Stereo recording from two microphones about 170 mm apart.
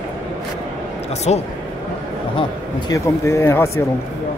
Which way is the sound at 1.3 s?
40° left (ahead or behind).